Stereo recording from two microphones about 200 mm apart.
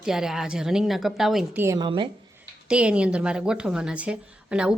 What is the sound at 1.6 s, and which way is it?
Speech, 20° right (ahead or behind).